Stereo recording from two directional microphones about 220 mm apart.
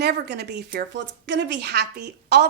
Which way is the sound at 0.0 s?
50° right (ahead or behind).